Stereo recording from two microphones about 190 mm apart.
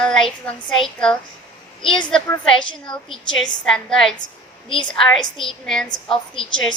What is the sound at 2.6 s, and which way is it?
Speech, 25° left (ahead or behind).